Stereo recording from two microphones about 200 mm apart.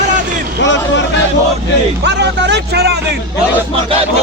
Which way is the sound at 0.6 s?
65° left (ahead or behind).